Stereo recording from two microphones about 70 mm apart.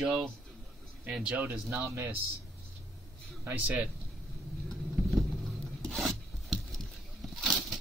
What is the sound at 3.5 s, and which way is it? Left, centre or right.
Speech, right.